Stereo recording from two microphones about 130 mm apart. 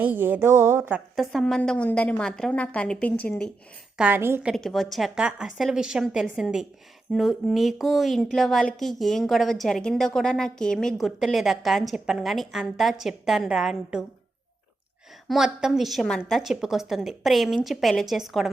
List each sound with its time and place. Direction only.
0.0 s a woman's voice: 15° right (ahead or behind)
1.1 s a woman's voice: centre (ahead or behind)
3.9 s a woman's voice: 15° right (ahead or behind)
4.4 s a woman's voice: centre (ahead or behind)
15.3 s a woman's voice: 5° right (ahead or behind)